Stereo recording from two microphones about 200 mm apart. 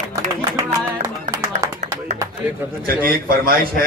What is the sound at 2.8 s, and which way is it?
Speech, 45° right (ahead or behind).